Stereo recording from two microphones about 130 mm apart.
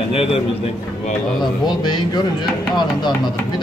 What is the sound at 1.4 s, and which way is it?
Speech, 35° left (ahead or behind).